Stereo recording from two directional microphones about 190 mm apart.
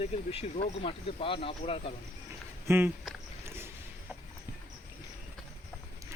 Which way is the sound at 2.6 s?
10° right (ahead or behind).